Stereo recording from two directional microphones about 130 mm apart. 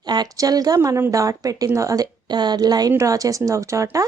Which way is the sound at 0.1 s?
30° right (ahead or behind).